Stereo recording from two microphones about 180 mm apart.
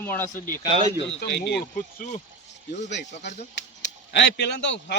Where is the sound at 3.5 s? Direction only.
75° left (ahead or behind).